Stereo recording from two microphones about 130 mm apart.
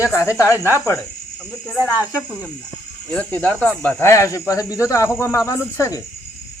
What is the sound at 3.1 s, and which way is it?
Speech, 10° left (ahead or behind).